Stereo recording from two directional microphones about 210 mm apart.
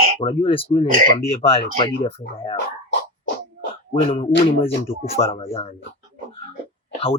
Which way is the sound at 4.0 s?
25° left (ahead or behind).